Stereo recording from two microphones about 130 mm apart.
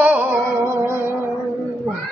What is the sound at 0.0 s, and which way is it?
Music, 15° right (ahead or behind).